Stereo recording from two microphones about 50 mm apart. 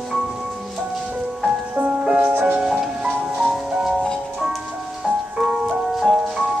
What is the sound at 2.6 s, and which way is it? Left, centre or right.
Music, centre.